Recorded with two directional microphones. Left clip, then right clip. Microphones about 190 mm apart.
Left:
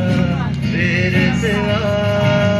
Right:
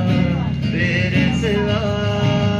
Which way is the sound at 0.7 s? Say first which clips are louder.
Left 2 dB; 70° right (ahead or behind).